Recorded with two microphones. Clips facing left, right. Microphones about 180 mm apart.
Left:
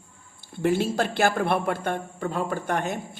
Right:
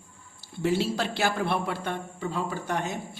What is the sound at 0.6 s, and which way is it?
Speech, 50° left (ahead or behind).